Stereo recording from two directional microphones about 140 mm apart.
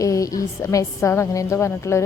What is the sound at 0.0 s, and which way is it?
Speech, 25° left (ahead or behind).